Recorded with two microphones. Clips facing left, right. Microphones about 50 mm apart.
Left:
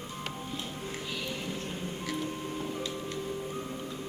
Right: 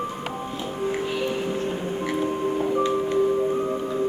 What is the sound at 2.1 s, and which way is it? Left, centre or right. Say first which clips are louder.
Music: right 11 dB; right.